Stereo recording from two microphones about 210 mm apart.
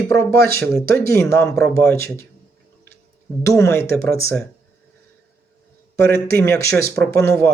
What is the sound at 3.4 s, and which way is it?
Speech, 10° left (ahead or behind).